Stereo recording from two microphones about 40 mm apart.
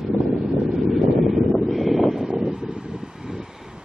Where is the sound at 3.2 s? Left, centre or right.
Centre.